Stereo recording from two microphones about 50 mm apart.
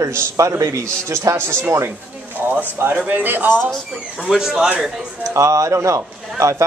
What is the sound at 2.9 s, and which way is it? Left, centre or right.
Speech, right.